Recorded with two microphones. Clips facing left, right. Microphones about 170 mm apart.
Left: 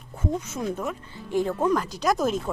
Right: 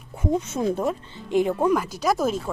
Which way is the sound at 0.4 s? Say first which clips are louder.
Right 5 dB; 25° right (ahead or behind).